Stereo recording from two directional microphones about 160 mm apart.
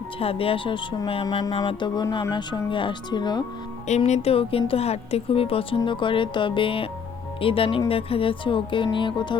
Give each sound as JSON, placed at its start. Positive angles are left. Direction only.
{"t": 0.2, "sound": "speech", "side_deg": 35}
{"t": 3.8, "sound": "speech", "side_deg": 45}